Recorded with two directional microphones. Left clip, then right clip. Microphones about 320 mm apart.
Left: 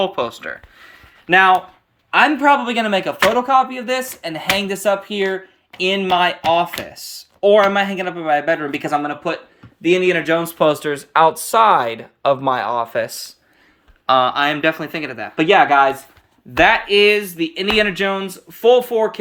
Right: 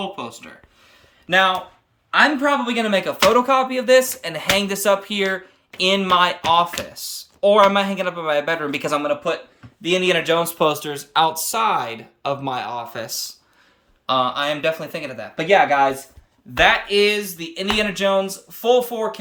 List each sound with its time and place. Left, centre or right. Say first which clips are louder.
0.0 s speech: left 9 dB; centre
9.8 s speech: left 3 dB; centre